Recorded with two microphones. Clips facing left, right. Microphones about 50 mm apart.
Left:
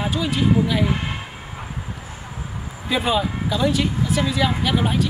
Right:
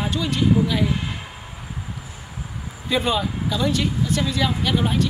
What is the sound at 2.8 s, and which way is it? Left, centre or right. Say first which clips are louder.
Speech: left 1 dB; centre.